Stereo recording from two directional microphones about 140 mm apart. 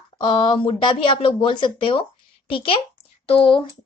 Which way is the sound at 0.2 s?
35° left (ahead or behind).